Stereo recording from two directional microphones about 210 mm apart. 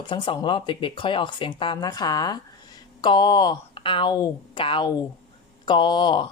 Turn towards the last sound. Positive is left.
turn(degrees=20)  # may be behind; listen again after turning